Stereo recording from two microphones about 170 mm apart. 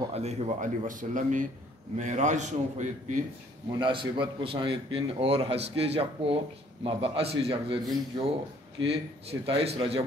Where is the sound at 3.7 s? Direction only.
30° right (ahead or behind).